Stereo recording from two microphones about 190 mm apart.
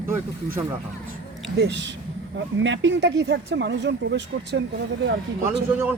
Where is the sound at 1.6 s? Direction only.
65° right (ahead or behind).